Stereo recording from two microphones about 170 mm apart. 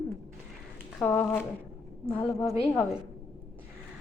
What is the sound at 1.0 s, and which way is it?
Speech, 10° left (ahead or behind).